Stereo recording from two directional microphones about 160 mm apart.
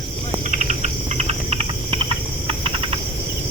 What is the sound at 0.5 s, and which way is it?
Cricket, 50° right (ahead or behind).